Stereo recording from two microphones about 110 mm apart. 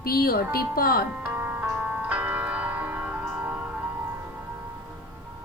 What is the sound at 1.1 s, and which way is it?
Music, 15° right (ahead or behind).